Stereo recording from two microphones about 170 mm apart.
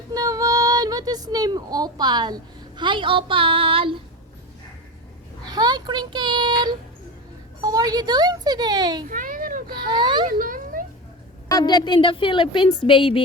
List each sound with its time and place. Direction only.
0.1 s speech: 20° right (ahead or behind)
5.5 s a child's voice: 25° right (ahead or behind)
9.0 s a sound: 55° right (ahead or behind)
9.7 s a child's voice: 25° right (ahead or behind)
10.2 s a sound: 55° right (ahead or behind)
11.4 s a woman's voice: 25° left (ahead or behind)